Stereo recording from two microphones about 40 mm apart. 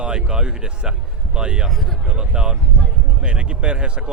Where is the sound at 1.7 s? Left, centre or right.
Centre.